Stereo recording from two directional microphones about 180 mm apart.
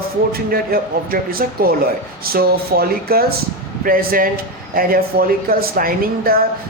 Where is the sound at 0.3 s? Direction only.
55° right (ahead or behind).